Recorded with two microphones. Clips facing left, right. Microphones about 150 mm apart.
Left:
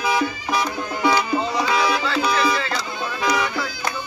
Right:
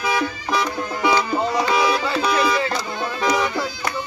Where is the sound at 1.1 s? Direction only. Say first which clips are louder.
Right 2 dB; 15° right (ahead or behind).